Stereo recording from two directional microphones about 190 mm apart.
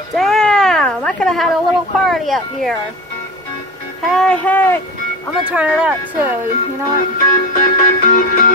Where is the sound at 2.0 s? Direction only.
Centre (ahead or behind).